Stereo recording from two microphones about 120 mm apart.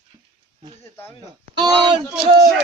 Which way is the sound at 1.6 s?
35° right (ahead or behind).